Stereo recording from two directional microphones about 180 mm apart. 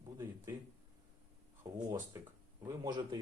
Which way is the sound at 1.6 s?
20° right (ahead or behind).